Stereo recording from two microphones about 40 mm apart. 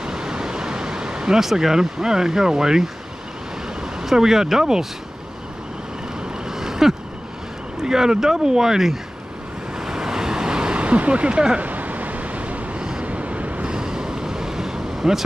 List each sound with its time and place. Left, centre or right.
0.0 s a sound: centre
3.6 s speech: centre
6.4 s vehicle: centre
7.8 s speech: centre
9.8 s waves: centre
11.6 s vehicle: right
13.7 s vehicle: centre